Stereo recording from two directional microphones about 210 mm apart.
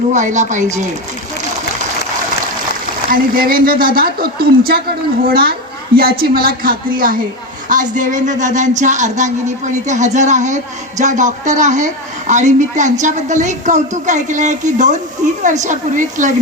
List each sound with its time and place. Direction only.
0.1 s speech: 35° right (ahead or behind)
3.1 s speech: 45° right (ahead or behind)